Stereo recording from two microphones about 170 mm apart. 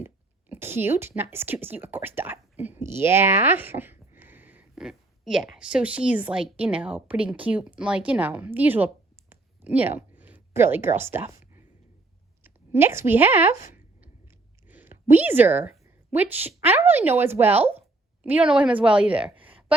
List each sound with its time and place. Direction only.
0.0 s speech: 10° right (ahead or behind)
9.3 s a sound: 10° right (ahead or behind)
12.4 s a woman's voice: 15° right (ahead or behind)
14.7 s a woman's voice: 10° right (ahead or behind)